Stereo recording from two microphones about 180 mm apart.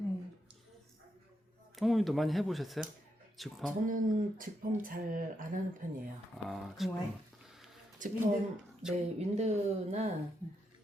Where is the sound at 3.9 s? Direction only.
50° right (ahead or behind).